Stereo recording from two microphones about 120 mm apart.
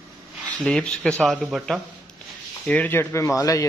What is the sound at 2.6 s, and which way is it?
Speech, 15° left (ahead or behind).